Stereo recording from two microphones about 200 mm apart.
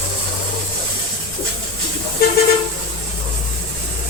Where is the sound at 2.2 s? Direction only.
50° left (ahead or behind).